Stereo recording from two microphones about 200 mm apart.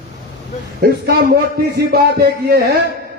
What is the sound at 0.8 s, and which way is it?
A man's voice, 50° right (ahead or behind).